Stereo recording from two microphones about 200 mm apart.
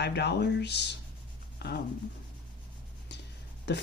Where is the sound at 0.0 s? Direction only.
55° left (ahead or behind).